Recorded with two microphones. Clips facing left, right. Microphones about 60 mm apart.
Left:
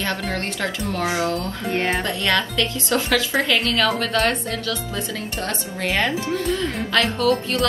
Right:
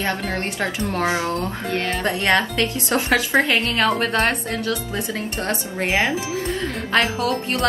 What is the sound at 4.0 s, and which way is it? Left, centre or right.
Speech, right.